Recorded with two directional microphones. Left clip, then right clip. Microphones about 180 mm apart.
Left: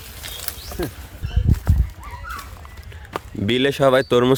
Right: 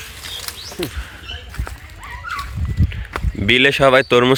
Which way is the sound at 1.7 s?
20° left (ahead or behind).